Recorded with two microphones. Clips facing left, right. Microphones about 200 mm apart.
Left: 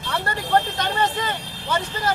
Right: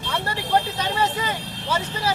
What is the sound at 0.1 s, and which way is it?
Speech, 10° right (ahead or behind).